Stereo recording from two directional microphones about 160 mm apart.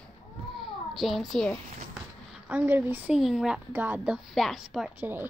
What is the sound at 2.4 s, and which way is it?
Speech, 10° right (ahead or behind).